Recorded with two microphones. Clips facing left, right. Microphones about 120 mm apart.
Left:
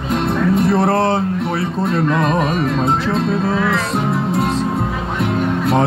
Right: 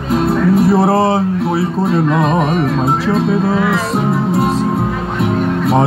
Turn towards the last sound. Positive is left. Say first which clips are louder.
# right 3 dB
turn(degrees=0)  # may be behind; listen again after turning